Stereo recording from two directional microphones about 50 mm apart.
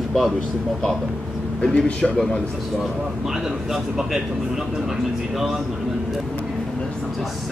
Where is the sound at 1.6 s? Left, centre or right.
Centre.